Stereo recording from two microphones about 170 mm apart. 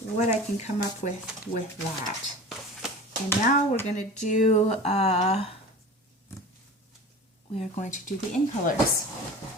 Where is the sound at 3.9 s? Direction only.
45° left (ahead or behind).